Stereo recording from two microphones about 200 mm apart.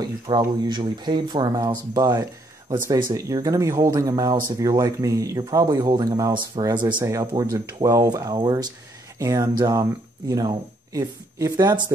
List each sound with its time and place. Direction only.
0.0 s speech: 20° right (ahead or behind)